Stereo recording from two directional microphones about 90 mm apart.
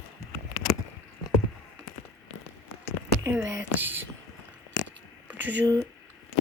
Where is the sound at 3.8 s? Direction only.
25° right (ahead or behind).